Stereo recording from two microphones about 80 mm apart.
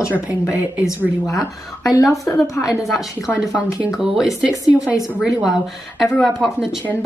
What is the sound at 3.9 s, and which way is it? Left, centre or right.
Speech, centre.